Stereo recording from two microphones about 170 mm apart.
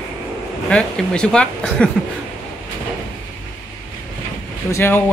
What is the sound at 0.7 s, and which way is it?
Speech, 5° left (ahead or behind).